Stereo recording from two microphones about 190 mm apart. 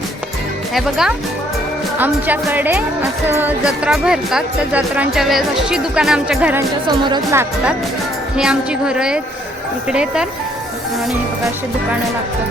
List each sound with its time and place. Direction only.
0.7 s speech: centre (ahead or behind)
6.8 s speech: 25° right (ahead or behind)
8.4 s a woman's voice: 5° right (ahead or behind)